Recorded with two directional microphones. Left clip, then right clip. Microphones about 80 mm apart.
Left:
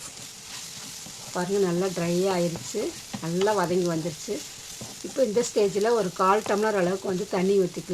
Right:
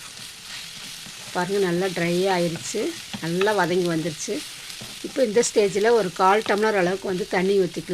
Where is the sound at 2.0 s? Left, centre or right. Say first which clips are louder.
Right 4 dB; right.